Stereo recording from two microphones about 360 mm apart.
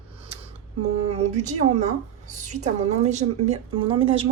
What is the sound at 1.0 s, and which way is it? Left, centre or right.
A woman's voice, centre.